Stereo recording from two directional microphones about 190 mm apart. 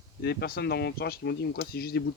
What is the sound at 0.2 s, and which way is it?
Speech, 60° left (ahead or behind).